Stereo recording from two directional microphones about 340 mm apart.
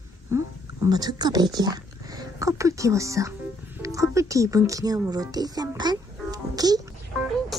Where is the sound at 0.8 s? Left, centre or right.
Centre.